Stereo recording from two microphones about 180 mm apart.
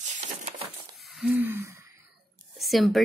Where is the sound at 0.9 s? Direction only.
Centre (ahead or behind).